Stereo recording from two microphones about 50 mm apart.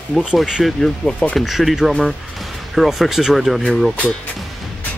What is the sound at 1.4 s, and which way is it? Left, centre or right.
Speech, centre.